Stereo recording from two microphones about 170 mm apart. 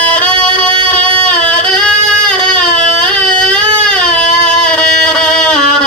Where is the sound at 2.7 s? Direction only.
50° left (ahead or behind).